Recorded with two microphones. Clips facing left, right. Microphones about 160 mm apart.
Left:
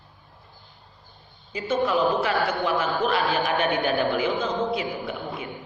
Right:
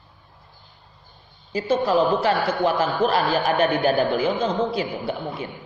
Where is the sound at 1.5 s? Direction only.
35° right (ahead or behind).